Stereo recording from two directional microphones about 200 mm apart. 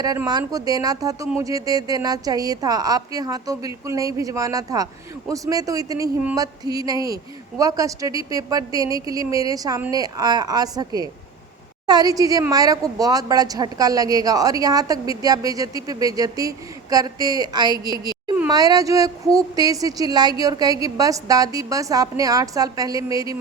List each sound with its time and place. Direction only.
0.0 s a woman's voice: 20° right (ahead or behind)
17.8 s a woman's voice: 20° left (ahead or behind)
18.4 s a woman's voice: 20° right (ahead or behind)